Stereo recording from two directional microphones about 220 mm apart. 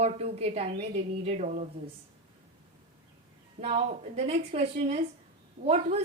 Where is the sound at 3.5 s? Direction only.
30° right (ahead or behind).